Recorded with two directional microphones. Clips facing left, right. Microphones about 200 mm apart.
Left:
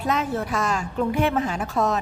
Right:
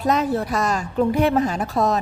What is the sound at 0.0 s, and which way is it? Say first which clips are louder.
A woman's voice: right 4 dB; 40° right (ahead or behind).